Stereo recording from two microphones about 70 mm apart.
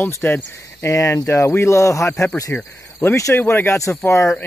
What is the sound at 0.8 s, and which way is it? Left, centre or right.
Speech, left.